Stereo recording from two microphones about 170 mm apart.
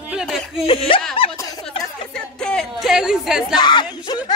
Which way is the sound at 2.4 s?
5° left (ahead or behind).